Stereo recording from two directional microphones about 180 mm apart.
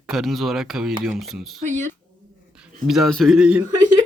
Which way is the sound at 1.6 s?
45° right (ahead or behind).